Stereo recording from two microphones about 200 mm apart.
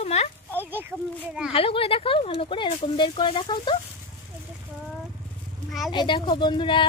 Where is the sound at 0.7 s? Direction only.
10° right (ahead or behind).